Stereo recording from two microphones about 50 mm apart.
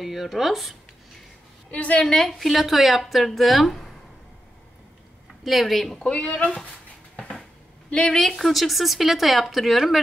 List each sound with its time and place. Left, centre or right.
0.0 s speech: centre
1.7 s speech: left
2.1 s speech: centre
5.4 s speech: centre
6.0 s speech: centre
7.9 s speech: centre
8.2 s speech: centre